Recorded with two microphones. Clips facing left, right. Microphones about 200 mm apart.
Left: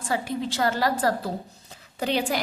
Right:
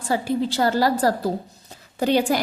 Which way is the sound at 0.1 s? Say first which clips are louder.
Right 5 dB; 35° right (ahead or behind).